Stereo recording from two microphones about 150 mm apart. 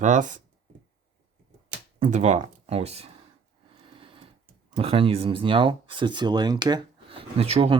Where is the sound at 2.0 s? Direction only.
55° right (ahead or behind).